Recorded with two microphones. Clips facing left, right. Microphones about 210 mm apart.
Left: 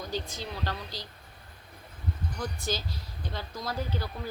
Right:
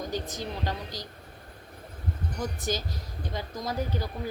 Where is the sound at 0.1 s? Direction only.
15° right (ahead or behind).